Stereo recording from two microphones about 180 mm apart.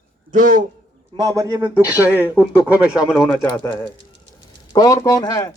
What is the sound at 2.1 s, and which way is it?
Speech, 10° left (ahead or behind).